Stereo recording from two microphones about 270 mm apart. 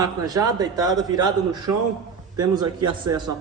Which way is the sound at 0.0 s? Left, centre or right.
Centre.